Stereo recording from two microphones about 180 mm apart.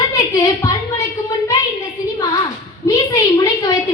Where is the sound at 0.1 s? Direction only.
20° left (ahead or behind).